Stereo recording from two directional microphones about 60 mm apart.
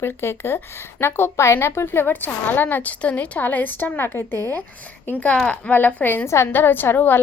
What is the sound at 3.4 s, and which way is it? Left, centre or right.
Speech, left.